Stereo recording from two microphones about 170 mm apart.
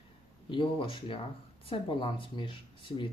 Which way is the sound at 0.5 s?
30° left (ahead or behind).